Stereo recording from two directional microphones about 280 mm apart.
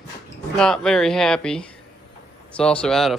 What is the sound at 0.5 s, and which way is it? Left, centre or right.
Speech, centre.